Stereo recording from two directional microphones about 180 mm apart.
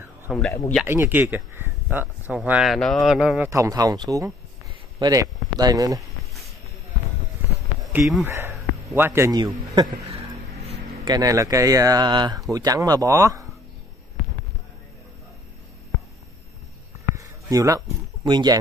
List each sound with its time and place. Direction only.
0.3 s speech: 5° right (ahead or behind)
3.4 s speech: 15° right (ahead or behind)
7.9 s speech: centre (ahead or behind)
8.3 s a man's voice: 15° right (ahead or behind)
11.1 s speech: 20° right (ahead or behind)
17.1 s a sound: 20° right (ahead or behind)